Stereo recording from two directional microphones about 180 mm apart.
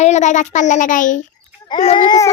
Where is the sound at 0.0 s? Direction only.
40° left (ahead or behind).